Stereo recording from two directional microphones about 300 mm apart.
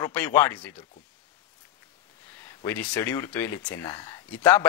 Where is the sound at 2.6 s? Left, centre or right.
Centre.